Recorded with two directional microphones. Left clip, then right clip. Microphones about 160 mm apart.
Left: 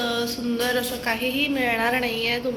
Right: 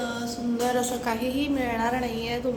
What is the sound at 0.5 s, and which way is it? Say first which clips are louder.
A woman's voice: left 1 dB; 10° right (ahead or behind).